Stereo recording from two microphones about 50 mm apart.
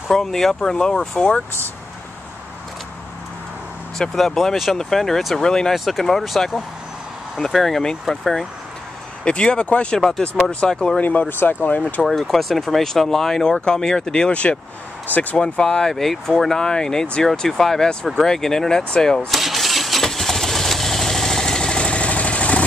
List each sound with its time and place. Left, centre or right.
0.1 s speech: centre
4.3 s speech: centre
9.2 s speech: centre
11.0 s speech: left
11.2 s speech: left
12.0 s speech: centre; by 14.6 s left
15.0 s speech: left
15.3 s speech: centre
19.3 s engine starting: centre; by 22.7 s left